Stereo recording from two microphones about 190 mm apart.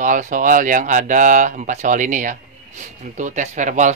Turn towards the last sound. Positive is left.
turn(degrees=-40)  # may be behind; listen again after turning